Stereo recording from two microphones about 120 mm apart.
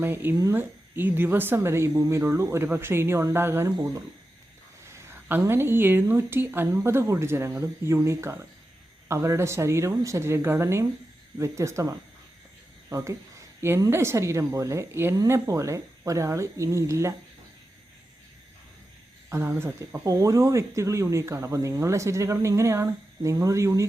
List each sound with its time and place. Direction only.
0.0 s speech: 15° right (ahead or behind)
19.3 s speech: 20° right (ahead or behind)